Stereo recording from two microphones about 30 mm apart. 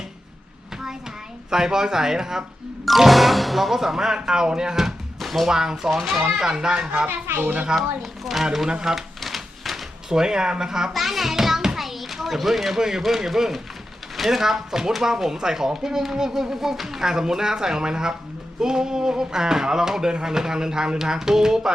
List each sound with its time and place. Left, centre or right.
1.5 s speech: right
2.8 s speech: centre
5.2 s music: centre
5.5 s speech: right
5.9 s speech: centre
6.6 s speech: right
7.1 s speech: right
7.8 s speech: centre
9.2 s a sound: centre
10.1 s speech: right
10.9 s a child's voice: centre
11.8 s children playing: centre
13.0 s speech: centre
17.0 s speech: centre